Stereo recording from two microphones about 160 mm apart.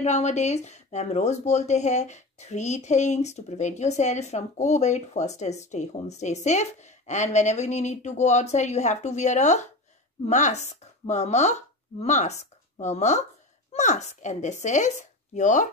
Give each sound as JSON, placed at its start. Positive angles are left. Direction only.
{"t": 0.0, "sound": "speech", "side_deg": 45}